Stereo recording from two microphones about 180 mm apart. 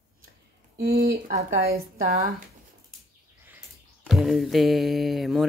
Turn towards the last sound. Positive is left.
turn(degrees=0)  # may be behind; listen again after turning